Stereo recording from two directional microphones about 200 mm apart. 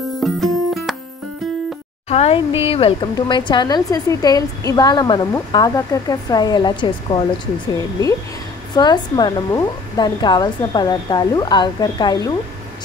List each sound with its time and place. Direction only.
0.2 s music: centre (ahead or behind)
2.0 s a woman's voice: 30° left (ahead or behind)
8.7 s a woman's voice: 20° left (ahead or behind)